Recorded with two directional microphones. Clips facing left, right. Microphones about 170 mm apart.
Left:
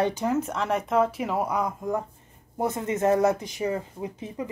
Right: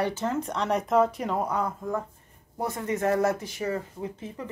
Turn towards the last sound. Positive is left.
turn(degrees=15)  # may be behind; listen again after turning